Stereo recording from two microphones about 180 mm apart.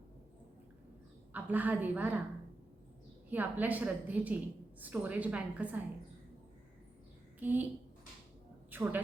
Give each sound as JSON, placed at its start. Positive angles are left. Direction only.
{"t": 1.3, "sound": "a woman's voice", "side_deg": -10}
{"t": 3.2, "sound": "a woman's voice", "side_deg": -10}
{"t": 7.3, "sound": "a woman's voice", "side_deg": -10}
{"t": 8.7, "sound": "a sound", "side_deg": -10}